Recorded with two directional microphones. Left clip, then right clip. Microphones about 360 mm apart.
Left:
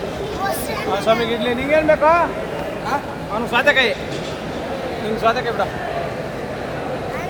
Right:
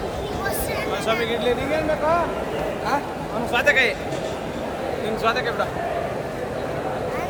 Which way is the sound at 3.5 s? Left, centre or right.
Centre.